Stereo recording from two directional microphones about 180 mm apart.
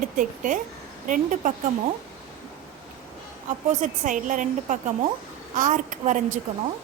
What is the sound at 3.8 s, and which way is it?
Speech, 45° right (ahead or behind).